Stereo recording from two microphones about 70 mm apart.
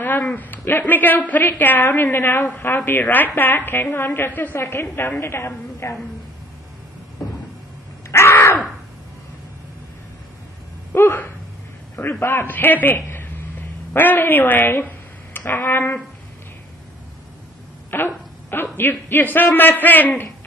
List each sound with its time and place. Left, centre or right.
0.0 s a woman's voice: left
4.6 s a woman's voice: left
8.1 s crow: left
11.0 s a sound: left
12.1 s a man's voice: left
17.9 s a man's voice: left